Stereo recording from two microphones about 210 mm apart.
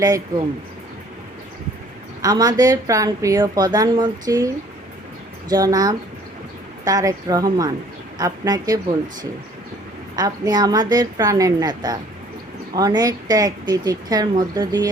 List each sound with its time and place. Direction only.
0.0 s a woman's voice: 15° right (ahead or behind)
2.2 s a woman's voice: 20° right (ahead or behind)
10.2 s a woman's voice: 15° right (ahead or behind)